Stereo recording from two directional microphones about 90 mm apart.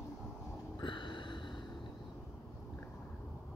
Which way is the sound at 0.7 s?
65° left (ahead or behind).